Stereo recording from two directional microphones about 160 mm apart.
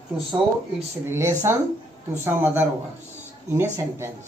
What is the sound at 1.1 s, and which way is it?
Speech, 15° right (ahead or behind).